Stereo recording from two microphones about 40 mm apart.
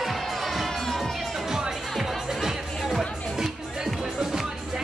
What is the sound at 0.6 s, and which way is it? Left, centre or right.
Crowd, centre.